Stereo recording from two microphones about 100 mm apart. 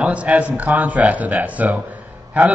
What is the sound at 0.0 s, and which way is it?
Speech, 10° right (ahead or behind).